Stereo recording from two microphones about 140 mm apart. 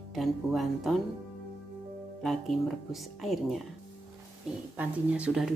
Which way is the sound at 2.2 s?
Centre (ahead or behind).